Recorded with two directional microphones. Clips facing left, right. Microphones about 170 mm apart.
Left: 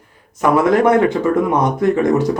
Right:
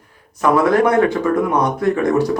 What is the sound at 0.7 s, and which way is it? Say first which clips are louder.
Speech: left 1 dB; 20° left (ahead or behind).